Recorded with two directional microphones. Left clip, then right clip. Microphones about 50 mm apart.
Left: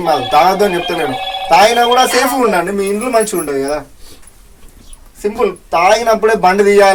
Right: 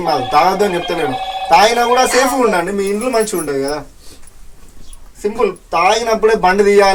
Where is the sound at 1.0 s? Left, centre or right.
Centre.